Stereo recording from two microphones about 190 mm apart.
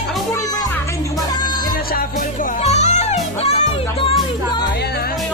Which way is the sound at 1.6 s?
50° left (ahead or behind).